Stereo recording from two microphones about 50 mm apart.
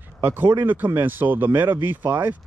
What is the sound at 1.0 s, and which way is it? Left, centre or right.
Speech, right.